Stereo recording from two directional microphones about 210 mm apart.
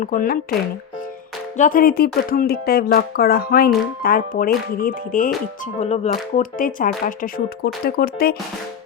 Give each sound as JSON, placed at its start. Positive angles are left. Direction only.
{"t": 0.0, "sound": "speech", "side_deg": 40}
{"t": 1.5, "sound": "speech", "side_deg": 40}
{"t": 5.8, "sound": "speech", "side_deg": 30}